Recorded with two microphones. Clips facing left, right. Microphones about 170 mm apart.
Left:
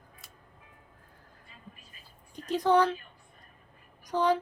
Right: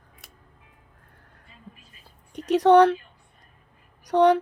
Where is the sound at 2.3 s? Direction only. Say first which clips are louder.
Right 8 dB; 70° right (ahead or behind).